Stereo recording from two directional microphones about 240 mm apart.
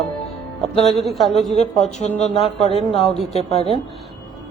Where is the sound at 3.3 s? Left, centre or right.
Left.